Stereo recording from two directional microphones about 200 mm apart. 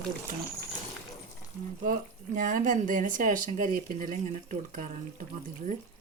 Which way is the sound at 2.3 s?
40° right (ahead or behind).